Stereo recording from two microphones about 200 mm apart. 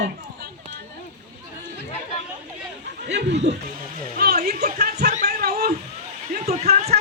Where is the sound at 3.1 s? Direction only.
60° right (ahead or behind).